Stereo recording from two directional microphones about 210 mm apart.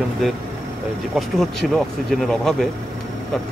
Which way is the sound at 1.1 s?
Centre (ahead or behind).